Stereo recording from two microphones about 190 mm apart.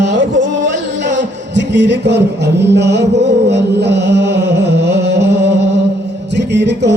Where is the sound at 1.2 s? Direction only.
65° right (ahead or behind).